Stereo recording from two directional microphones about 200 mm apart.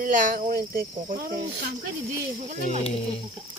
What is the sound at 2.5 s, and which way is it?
Speech, 40° right (ahead or behind).